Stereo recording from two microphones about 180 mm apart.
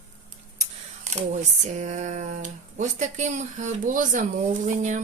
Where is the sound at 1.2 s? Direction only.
40° right (ahead or behind).